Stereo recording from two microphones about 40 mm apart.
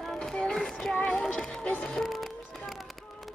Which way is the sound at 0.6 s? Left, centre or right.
Centre.